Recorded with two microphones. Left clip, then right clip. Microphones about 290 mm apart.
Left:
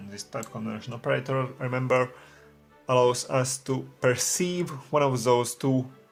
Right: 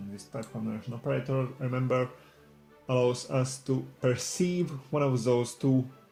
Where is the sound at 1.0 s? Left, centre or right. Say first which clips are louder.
Left 4 dB; left.